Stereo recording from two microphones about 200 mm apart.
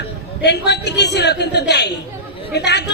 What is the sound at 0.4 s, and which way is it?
A woman's voice, 60° left (ahead or behind).